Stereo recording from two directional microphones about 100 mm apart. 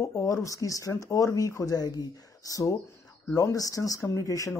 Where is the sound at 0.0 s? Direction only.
30° left (ahead or behind).